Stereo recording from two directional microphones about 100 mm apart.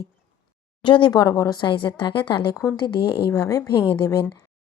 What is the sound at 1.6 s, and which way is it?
Speech, 55° left (ahead or behind).